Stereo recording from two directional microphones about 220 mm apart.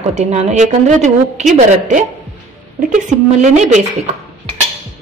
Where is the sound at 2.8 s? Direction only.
35° right (ahead or behind).